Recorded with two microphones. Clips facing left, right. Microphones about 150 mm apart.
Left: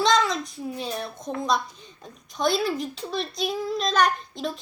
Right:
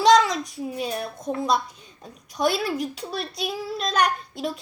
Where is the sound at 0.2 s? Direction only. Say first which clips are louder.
Right 2 dB; 10° right (ahead or behind).